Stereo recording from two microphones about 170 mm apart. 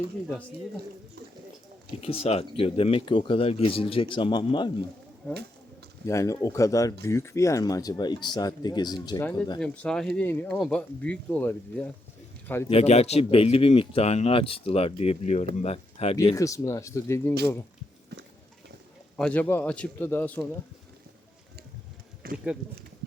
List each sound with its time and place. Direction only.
2.0 s speech: 35° left (ahead or behind)
6.1 s speech: 20° left (ahead or behind)
9.6 s speech: 5° left (ahead or behind)
12.7 s speech: 40° left (ahead or behind)
16.3 s speech: 20° left (ahead or behind)
19.1 s speech: 10° left (ahead or behind)
22.2 s a sound: 60° right (ahead or behind)